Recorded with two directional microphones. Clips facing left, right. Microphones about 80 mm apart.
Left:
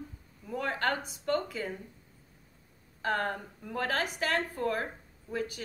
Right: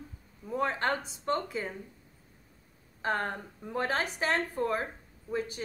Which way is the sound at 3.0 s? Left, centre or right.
Right.